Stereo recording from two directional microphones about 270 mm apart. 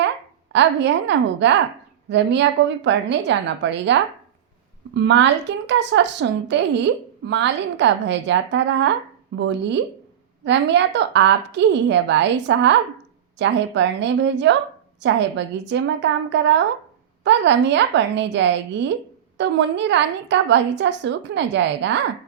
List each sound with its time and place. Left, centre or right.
0.5 s a woman's voice: right
4.9 s a woman's voice: right